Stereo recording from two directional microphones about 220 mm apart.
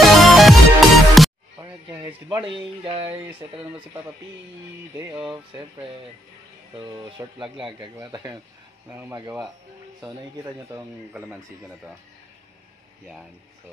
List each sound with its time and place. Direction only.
0.0 s music: centre (ahead or behind)
1.6 s speech: 20° right (ahead or behind)
3.1 s speech: 10° right (ahead or behind)
6.7 s speech: 20° right (ahead or behind)
10.7 s speech: 10° right (ahead or behind)